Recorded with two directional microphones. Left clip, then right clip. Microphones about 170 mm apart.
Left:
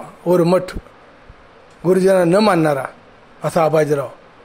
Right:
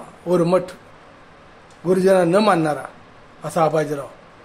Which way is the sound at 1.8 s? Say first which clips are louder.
Left 2 dB; 45° left (ahead or behind).